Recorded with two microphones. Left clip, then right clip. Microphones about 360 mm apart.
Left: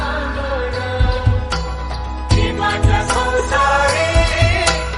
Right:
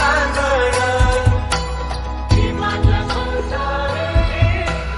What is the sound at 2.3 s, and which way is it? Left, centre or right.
Music, centre.